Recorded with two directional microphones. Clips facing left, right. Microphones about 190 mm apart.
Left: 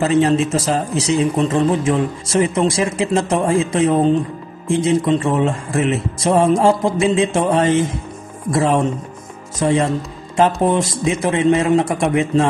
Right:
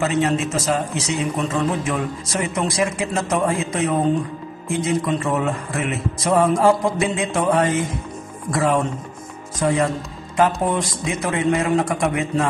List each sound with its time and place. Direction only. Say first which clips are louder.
0.0 s speech: left 5 dB; 30° left (ahead or behind)